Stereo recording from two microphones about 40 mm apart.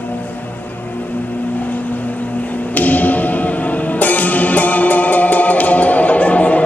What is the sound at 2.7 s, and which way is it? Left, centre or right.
Music, left.